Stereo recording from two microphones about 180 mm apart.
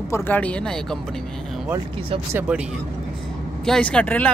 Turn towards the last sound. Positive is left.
turn(degrees=5)  # may be behind; listen again after turning